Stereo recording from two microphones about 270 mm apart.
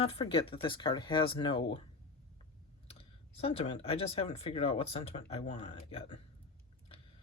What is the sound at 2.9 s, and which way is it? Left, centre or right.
Speech, left.